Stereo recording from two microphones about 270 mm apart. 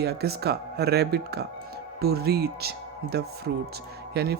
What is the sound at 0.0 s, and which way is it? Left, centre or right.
Speech, right.